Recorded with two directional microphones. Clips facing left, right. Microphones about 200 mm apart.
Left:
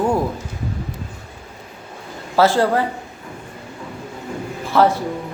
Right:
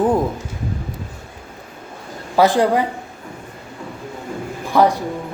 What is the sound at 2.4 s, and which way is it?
Speech, 15° right (ahead or behind).